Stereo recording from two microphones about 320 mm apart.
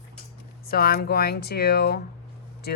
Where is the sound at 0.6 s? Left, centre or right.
Left.